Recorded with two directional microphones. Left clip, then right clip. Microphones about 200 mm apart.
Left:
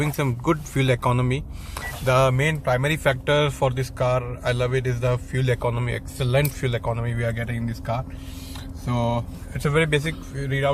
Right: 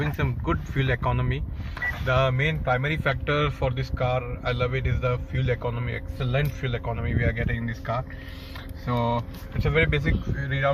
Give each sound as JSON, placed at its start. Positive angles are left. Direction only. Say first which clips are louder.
{"t": 0.0, "sound": "speech", "louder": "left 4 dB", "side_deg": 40}
{"t": 9.7, "sound": "speech", "louder": "left 2 dB", "side_deg": 45}
{"t": 10.4, "sound": "speech", "louder": "left 2 dB", "side_deg": 55}